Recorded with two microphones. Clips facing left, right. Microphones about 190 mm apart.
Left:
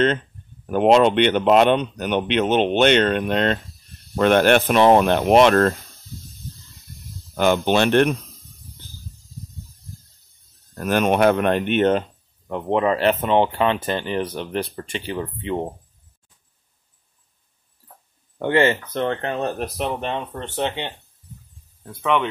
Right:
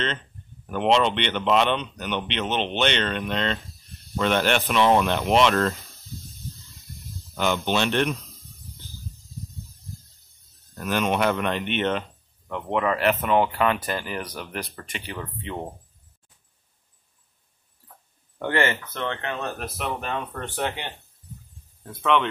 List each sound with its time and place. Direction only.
0.7 s speech: 45° left (ahead or behind)
7.3 s speech: 50° left (ahead or behind)
10.7 s speech: 50° left (ahead or behind); by 15.7 s 25° left (ahead or behind)
18.4 s speech: 25° left (ahead or behind)
21.8 s speech: 10° left (ahead or behind)